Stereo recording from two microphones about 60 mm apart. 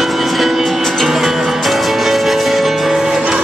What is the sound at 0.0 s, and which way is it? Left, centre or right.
Music, centre.